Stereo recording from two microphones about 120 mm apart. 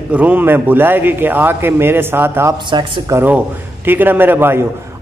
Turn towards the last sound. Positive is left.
turn(degrees=-20)  # may be behind; listen again after turning